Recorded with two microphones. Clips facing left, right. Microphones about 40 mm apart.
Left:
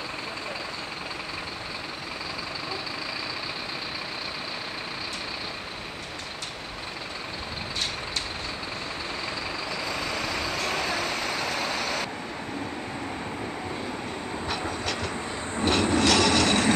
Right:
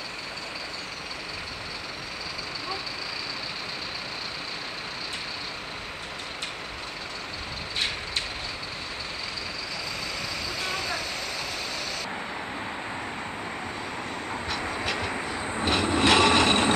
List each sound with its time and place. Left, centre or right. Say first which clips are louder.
11.8 s vehicle: left 4 dB; centre
14.5 s train: right 1 dB; centre
16.0 s vehicle: right 4 dB; right